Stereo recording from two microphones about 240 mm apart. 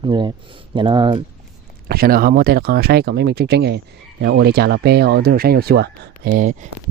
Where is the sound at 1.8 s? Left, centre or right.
Right.